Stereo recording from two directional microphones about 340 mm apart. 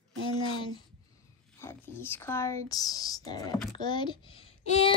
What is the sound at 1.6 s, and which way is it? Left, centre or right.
A child's voice, centre.